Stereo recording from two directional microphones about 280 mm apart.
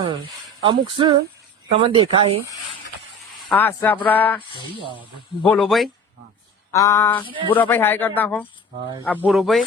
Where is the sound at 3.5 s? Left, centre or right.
Centre.